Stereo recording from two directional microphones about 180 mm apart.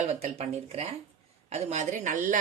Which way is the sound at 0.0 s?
40° right (ahead or behind).